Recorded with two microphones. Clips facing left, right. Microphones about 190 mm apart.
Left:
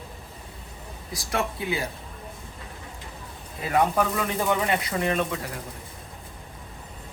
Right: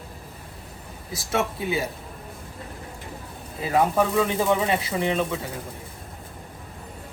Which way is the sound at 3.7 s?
Centre (ahead or behind).